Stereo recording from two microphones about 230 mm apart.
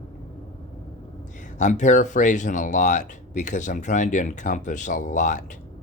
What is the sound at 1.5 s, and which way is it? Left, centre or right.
Speech, left.